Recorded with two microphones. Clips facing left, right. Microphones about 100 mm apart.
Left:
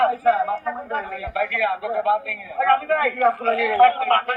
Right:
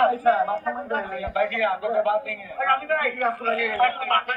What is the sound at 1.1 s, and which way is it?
Speech, 30° right (ahead or behind).